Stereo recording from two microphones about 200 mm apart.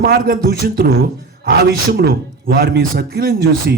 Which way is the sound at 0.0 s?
50° right (ahead or behind).